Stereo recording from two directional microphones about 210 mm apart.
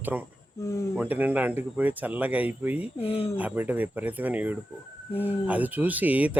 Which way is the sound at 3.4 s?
10° right (ahead or behind).